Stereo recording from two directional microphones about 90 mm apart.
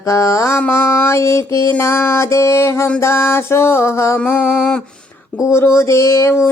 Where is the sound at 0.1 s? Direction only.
35° left (ahead or behind).